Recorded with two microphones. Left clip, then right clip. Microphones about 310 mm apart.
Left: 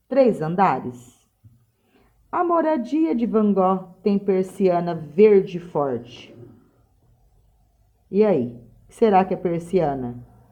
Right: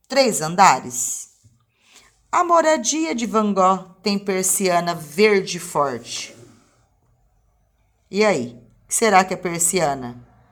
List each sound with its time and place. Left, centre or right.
0.1 s speech: right
8.1 s speech: centre